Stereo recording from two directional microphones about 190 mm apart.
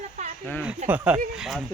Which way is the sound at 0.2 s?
40° right (ahead or behind).